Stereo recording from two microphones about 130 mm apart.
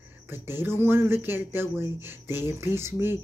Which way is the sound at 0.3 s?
15° right (ahead or behind).